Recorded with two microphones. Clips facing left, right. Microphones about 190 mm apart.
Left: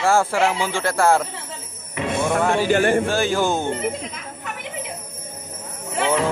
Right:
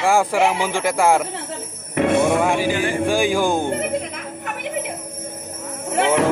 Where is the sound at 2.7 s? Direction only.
55° left (ahead or behind).